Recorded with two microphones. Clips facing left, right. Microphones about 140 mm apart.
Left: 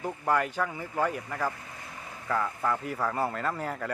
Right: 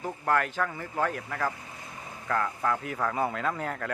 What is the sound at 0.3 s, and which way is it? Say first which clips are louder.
Speech: even; 10° left (ahead or behind).